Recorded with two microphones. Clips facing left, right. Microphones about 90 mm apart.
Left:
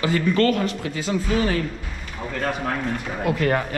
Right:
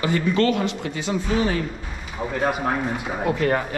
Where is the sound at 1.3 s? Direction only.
10° right (ahead or behind).